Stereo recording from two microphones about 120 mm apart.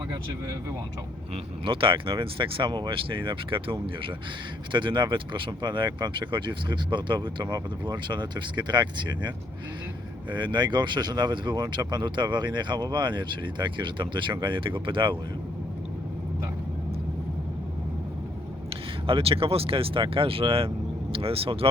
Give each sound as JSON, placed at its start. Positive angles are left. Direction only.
{"t": 1.3, "sound": "speech", "side_deg": -45}
{"t": 19.0, "sound": "speech", "side_deg": -50}